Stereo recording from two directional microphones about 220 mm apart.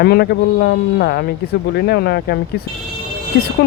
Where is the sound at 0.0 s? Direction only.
45° left (ahead or behind).